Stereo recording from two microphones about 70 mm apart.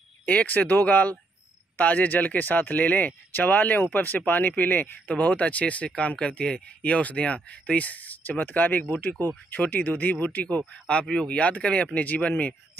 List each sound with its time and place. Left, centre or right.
0.2 s speech: left
10.6 s speech: centre